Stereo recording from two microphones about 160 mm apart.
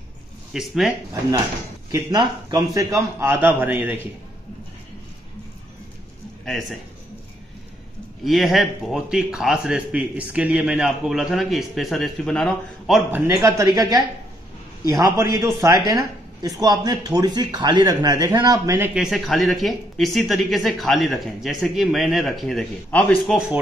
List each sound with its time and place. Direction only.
0.5 s a man's voice: centre (ahead or behind)
1.9 s a man's voice: 20° right (ahead or behind)
6.4 s a man's voice: centre (ahead or behind)
8.2 s a man's voice: centre (ahead or behind)
13.1 s speech: 20° right (ahead or behind)
18.9 s a man's voice: centre (ahead or behind)